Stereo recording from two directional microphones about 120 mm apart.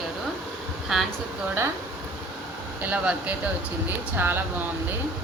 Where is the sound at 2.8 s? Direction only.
10° right (ahead or behind).